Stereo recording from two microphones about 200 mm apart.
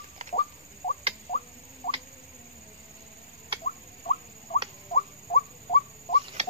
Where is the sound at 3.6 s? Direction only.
30° left (ahead or behind).